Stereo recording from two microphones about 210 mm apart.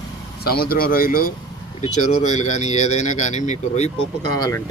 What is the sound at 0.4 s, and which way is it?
Speech, 45° left (ahead or behind).